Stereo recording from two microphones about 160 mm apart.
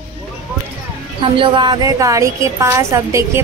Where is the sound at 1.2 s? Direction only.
30° right (ahead or behind).